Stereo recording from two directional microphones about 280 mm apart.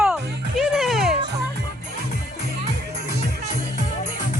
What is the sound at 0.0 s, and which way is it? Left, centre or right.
Music, centre.